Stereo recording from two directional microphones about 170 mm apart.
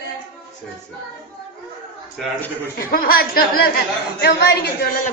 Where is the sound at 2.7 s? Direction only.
60° left (ahead or behind).